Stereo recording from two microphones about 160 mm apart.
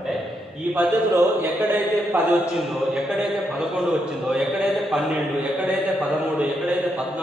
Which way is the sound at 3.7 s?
5° right (ahead or behind).